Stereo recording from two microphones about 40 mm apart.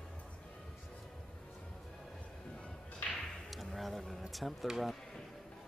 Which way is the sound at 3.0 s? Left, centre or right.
Left.